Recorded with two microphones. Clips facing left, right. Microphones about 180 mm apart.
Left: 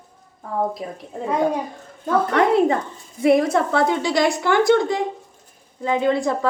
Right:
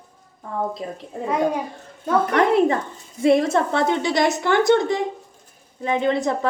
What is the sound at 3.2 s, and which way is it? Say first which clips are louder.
A woman's voice: left 1 dB; 25° right (ahead or behind).